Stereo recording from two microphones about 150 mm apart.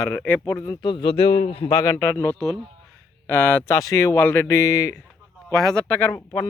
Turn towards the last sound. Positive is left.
turn(degrees=10)  # may be behind; listen again after turning